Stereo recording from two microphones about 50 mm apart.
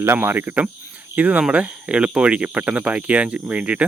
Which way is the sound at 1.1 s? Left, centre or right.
Right.